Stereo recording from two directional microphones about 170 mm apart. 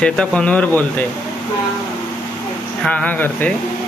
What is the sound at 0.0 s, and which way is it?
Speech, 5° left (ahead or behind).